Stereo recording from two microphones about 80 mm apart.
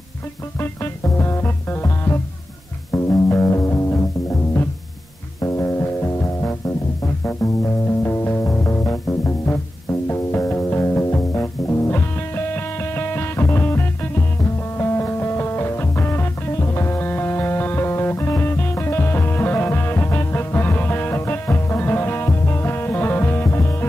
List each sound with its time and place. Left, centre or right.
1.0 s music: left
5.4 s music: left